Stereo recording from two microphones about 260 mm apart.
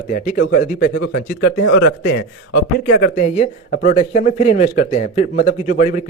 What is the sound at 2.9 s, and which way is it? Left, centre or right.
A man's voice, left.